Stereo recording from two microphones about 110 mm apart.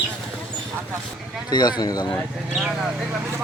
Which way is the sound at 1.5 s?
40° left (ahead or behind).